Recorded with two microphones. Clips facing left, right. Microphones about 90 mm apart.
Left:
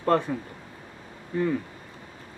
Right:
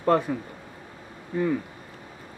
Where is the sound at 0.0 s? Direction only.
15° right (ahead or behind).